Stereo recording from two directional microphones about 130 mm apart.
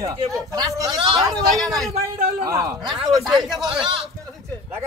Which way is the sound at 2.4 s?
25° right (ahead or behind).